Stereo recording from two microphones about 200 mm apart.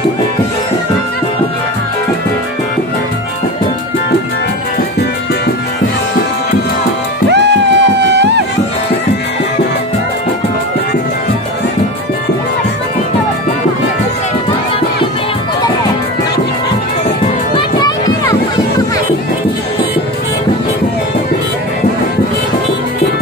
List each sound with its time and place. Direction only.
7.2 s music: 60° right (ahead or behind)
17.6 s music: 20° left (ahead or behind)